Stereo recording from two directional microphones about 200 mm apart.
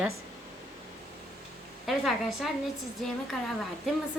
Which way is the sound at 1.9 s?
Centre (ahead or behind).